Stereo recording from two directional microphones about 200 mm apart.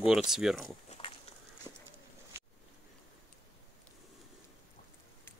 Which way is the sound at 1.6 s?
15° right (ahead or behind).